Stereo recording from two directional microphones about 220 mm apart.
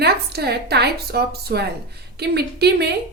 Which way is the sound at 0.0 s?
45° right (ahead or behind).